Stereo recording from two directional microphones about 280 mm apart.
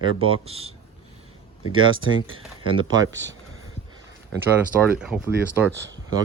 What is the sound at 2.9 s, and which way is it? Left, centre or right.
Speech, right.